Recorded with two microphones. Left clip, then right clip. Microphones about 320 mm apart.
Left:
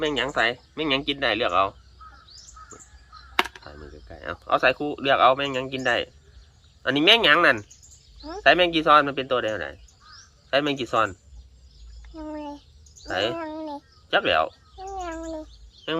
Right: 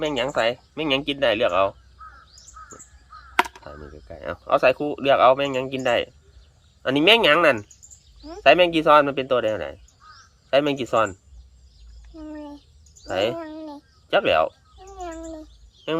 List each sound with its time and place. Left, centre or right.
0.0 s speech: right
3.7 s speech: right
12.1 s a sound: centre
13.1 s speech: right
13.4 s a sound: centre
14.1 s speech: right
15.0 s speech: centre